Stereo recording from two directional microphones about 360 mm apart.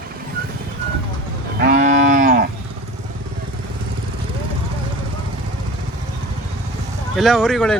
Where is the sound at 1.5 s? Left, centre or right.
Right.